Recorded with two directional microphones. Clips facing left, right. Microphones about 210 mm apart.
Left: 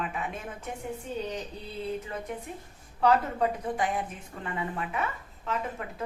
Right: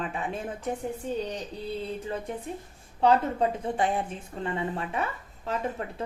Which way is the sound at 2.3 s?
30° right (ahead or behind).